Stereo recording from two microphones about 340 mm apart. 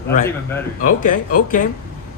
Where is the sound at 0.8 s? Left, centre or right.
Left.